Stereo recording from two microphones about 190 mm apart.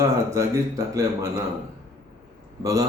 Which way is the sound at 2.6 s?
20° right (ahead or behind).